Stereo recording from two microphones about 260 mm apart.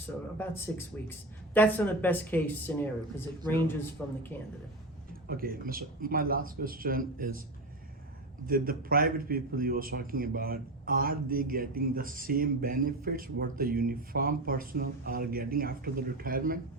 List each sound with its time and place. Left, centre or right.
0.3 s speech: centre
5.3 s a man's voice: right
8.4 s a man's voice: right